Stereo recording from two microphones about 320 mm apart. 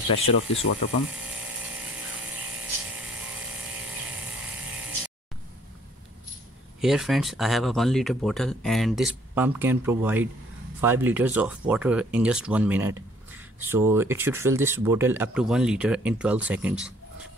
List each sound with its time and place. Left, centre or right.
0.6 s speech: left
6.8 s speech: centre